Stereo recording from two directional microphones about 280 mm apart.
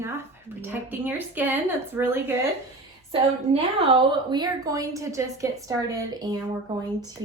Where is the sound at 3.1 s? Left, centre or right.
Centre.